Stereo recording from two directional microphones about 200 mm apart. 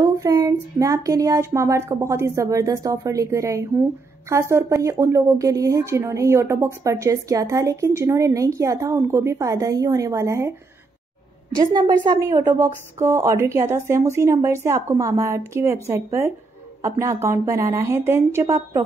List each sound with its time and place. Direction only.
0.0 s a woman's voice: 15° right (ahead or behind)
11.5 s a woman's voice: 20° right (ahead or behind)